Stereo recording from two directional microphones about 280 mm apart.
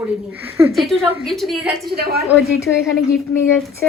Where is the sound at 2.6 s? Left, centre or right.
Centre.